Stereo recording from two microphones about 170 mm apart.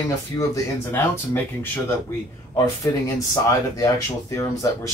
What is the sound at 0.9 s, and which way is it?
Speech, 10° left (ahead or behind).